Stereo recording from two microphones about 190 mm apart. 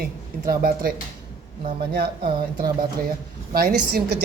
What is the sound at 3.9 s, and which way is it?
Speech, 55° right (ahead or behind).